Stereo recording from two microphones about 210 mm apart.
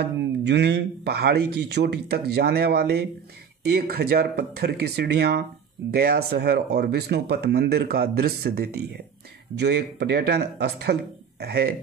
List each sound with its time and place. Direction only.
0.0 s speech: 55° right (ahead or behind)